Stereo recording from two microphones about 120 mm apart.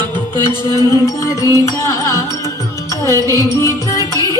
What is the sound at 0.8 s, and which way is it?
Music, 25° left (ahead or behind).